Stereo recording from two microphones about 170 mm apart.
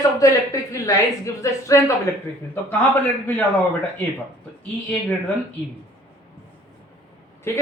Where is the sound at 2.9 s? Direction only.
10° left (ahead or behind).